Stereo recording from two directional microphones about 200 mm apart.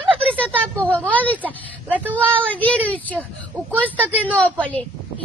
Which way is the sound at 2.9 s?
5° left (ahead or behind).